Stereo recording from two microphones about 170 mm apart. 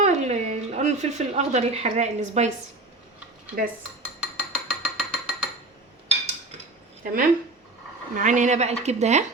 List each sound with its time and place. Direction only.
0.0 s speech: 40° right (ahead or behind)
4.0 s a sound: 5° right (ahead or behind)
7.0 s speech: 55° right (ahead or behind)